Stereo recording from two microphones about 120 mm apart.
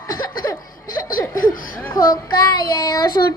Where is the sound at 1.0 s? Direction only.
30° left (ahead or behind).